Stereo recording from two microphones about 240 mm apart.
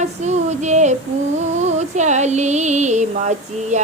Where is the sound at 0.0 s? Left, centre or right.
Right.